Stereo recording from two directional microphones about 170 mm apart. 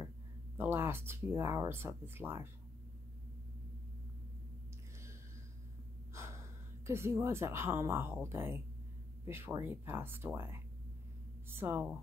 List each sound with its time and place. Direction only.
0.6 s speech: 15° right (ahead or behind)
6.1 s gasp: 15° right (ahead or behind)
6.9 s speech: 15° right (ahead or behind)